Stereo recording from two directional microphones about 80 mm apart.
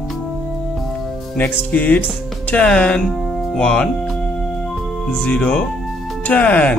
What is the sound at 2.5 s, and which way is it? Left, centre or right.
Speech, centre.